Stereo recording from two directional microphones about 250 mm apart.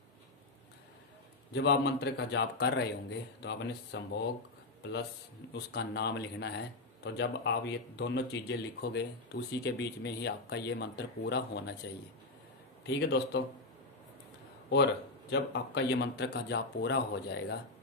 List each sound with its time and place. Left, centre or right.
1.5 s speech: left
5.5 s speech: left
12.8 s speech: left
14.7 s speech: left